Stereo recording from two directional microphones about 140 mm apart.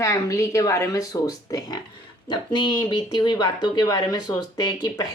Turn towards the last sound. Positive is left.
turn(degrees=30)  # may be behind; listen again after turning